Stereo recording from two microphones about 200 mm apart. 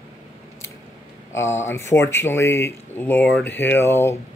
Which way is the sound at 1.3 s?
15° left (ahead or behind).